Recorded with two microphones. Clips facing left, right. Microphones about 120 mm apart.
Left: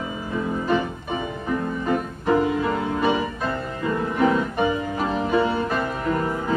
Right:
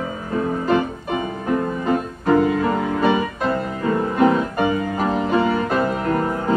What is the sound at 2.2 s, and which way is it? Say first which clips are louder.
Music: right 4 dB; 45° right (ahead or behind).